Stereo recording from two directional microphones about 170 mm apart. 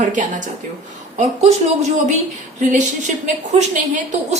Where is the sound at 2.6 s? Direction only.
45° right (ahead or behind).